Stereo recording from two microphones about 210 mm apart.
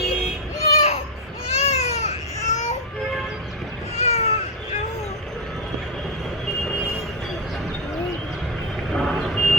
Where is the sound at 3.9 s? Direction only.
30° left (ahead or behind).